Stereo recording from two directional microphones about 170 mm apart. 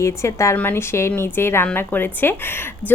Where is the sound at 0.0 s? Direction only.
15° left (ahead or behind).